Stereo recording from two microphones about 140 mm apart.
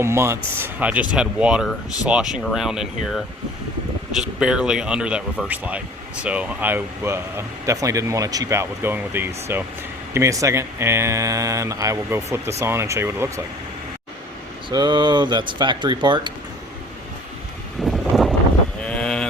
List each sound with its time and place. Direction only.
0.0 s speech: 20° right (ahead or behind); by 3.2 s 5° right (ahead or behind)
4.2 s speech: 5° right (ahead or behind)
14.7 s speech: 30° right (ahead or behind)
17.8 s a sound: centre (ahead or behind)